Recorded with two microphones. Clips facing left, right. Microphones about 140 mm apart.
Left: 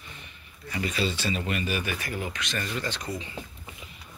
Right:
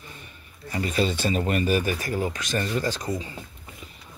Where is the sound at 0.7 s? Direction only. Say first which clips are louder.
Right 4 dB; 40° right (ahead or behind).